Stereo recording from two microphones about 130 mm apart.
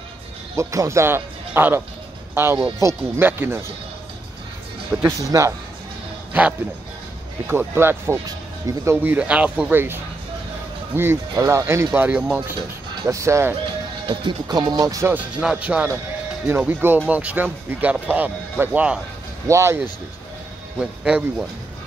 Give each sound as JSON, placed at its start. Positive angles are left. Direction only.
{"t": 0.6, "sound": "speech", "side_deg": -25}
{"t": 5.0, "sound": "speech", "side_deg": -20}
{"t": 7.4, "sound": "speech", "side_deg": -15}
{"t": 11.0, "sound": "speech", "side_deg": -20}
{"t": 14.0, "sound": "speech", "side_deg": -35}
{"t": 15.1, "sound": "speech", "side_deg": -10}
{"t": 20.8, "sound": "speech", "side_deg": -5}